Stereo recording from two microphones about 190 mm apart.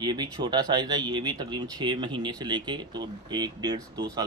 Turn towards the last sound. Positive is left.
turn(degrees=-20)  # may be behind; listen again after turning